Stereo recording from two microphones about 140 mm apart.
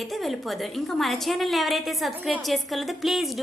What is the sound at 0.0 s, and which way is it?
A woman's voice, centre (ahead or behind).